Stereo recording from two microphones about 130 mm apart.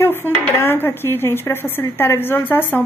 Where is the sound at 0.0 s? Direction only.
15° left (ahead or behind).